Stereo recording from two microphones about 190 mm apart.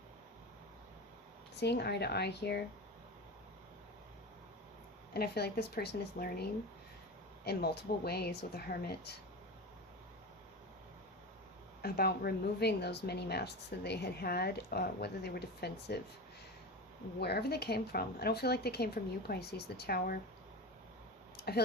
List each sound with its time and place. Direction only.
1.5 s a woman's voice: 60° left (ahead or behind)
5.1 s a woman's voice: 55° left (ahead or behind)
11.8 s a woman's voice: 55° left (ahead or behind)
17.2 s a woman's voice: 60° left (ahead or behind)
21.3 s a sound: 55° left (ahead or behind)